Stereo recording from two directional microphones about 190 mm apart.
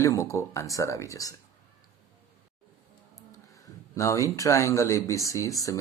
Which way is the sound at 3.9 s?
15° left (ahead or behind).